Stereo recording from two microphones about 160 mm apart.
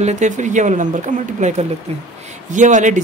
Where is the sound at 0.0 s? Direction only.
50° right (ahead or behind).